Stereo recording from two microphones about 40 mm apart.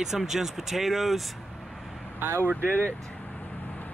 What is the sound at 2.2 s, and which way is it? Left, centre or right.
Speech, right.